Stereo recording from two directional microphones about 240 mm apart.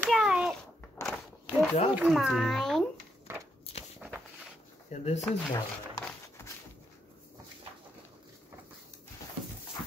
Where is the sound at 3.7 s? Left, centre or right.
Left.